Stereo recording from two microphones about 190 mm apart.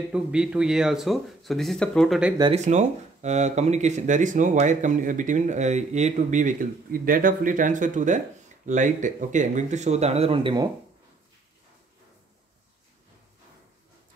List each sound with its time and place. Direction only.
0.1 s speech: 5° right (ahead or behind)
2.5 s speech: 40° right (ahead or behind)